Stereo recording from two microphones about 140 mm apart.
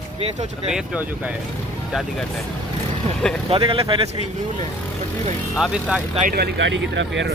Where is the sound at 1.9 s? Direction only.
Centre (ahead or behind).